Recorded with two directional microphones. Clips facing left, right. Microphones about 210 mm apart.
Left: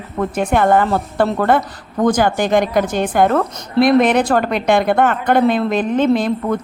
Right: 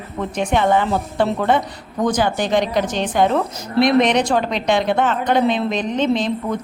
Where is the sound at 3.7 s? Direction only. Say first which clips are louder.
Left 3 dB; centre (ahead or behind).